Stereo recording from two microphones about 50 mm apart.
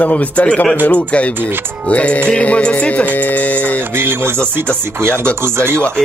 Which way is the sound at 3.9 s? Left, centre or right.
Right.